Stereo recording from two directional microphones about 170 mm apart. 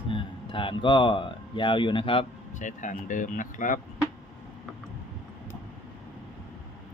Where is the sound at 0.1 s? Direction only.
30° left (ahead or behind).